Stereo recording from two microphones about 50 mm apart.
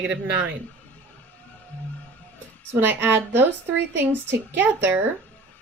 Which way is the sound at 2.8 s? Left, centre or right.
Right.